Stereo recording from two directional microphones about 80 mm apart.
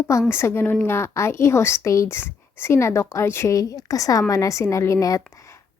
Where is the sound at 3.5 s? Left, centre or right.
Left.